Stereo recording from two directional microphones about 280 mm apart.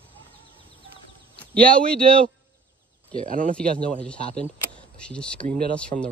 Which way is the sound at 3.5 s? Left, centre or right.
Centre.